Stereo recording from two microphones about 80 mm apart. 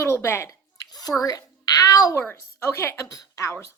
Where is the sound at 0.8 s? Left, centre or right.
Left.